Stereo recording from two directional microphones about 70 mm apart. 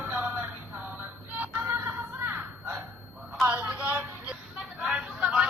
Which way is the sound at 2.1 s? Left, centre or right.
Right.